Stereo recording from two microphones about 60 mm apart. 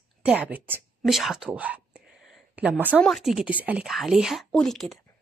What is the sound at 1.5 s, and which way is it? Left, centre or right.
Speech, right.